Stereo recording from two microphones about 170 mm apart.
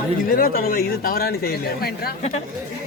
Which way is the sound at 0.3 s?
60° left (ahead or behind).